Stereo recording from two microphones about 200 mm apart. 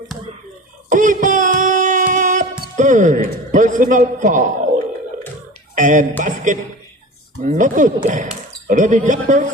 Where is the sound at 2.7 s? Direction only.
40° right (ahead or behind).